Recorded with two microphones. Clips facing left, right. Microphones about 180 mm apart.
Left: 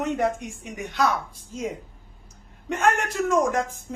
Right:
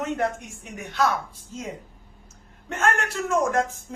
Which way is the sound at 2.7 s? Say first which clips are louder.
Left 2 dB; 15° left (ahead or behind).